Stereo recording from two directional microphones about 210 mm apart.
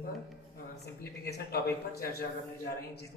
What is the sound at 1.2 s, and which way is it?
A man's voice, 50° left (ahead or behind).